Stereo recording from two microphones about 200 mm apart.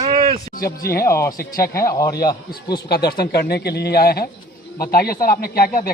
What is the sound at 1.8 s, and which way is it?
Speech, 15° left (ahead or behind).